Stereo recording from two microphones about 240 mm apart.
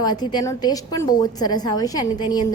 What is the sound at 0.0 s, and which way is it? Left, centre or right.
A woman's voice, centre.